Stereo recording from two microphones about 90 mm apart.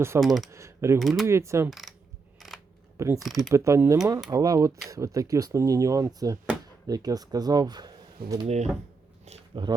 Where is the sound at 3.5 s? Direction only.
35° right (ahead or behind); by 8.4 s 50° right (ahead or behind).